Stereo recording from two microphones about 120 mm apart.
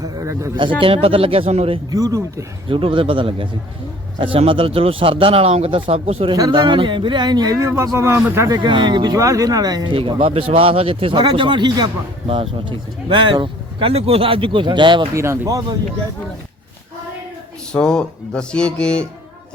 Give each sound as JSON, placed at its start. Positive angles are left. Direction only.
{"t": 0.0, "sound": "a sound", "side_deg": -25}
{"t": 0.5, "sound": "speech", "side_deg": -45}
{"t": 1.9, "sound": "speech", "side_deg": -30}
{"t": 2.6, "sound": "speech", "side_deg": -45}
{"t": 6.3, "sound": "speech", "side_deg": -35}
{"t": 8.5, "sound": "speech", "side_deg": -40}
{"t": 9.9, "sound": "speech", "side_deg": -45}
{"t": 15.1, "sound": "speech", "side_deg": -25}
{"t": 17.7, "sound": "speech", "side_deg": 5}